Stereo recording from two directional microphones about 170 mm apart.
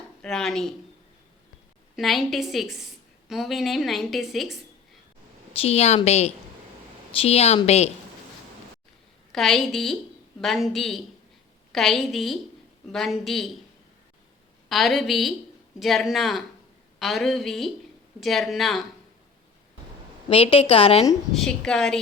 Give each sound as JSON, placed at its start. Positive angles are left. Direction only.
{"t": 0.2, "sound": "a woman's voice", "side_deg": 5}
{"t": 2.0, "sound": "a woman's voice", "side_deg": 0}
{"t": 5.5, "sound": "a woman's voice", "side_deg": 35}
{"t": 9.3, "sound": "a woman's voice", "side_deg": 0}
{"t": 14.7, "sound": "a woman's voice", "side_deg": 0}
{"t": 20.3, "sound": "a woman's voice", "side_deg": 35}
{"t": 21.3, "sound": "a woman's voice", "side_deg": 5}